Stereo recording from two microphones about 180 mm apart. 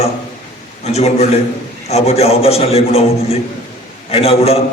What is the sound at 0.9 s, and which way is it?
A man's voice, 35° left (ahead or behind).